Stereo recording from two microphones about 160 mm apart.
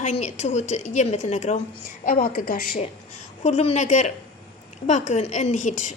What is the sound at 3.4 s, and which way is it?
A woman's voice, 40° left (ahead or behind).